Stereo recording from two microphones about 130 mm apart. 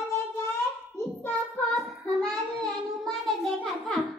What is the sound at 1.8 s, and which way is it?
Child singing, 5° left (ahead or behind).